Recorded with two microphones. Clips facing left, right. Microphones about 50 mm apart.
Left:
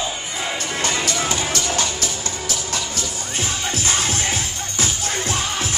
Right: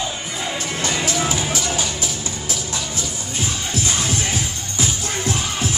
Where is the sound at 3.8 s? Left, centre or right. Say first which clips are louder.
Left 1 dB; left.